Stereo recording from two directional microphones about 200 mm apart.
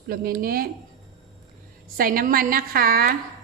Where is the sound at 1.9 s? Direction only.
45° right (ahead or behind).